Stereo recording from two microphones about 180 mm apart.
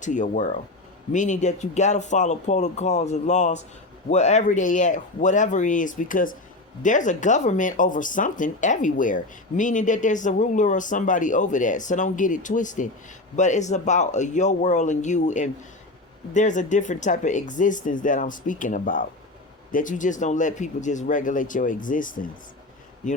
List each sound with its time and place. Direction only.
0.0 s speech: 45° left (ahead or behind)